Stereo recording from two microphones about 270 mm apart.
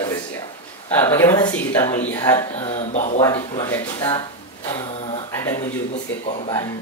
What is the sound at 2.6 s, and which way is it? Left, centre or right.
Speech, left.